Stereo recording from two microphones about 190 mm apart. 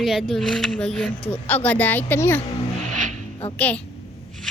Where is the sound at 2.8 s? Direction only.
40° right (ahead or behind).